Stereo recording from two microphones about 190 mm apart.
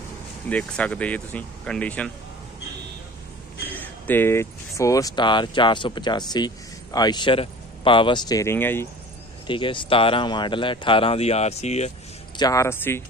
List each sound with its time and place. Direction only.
0.5 s speech: 5° left (ahead or behind)
4.1 s speech: 10° left (ahead or behind)
9.5 s speech: 25° left (ahead or behind)
12.4 s speech: 20° left (ahead or behind)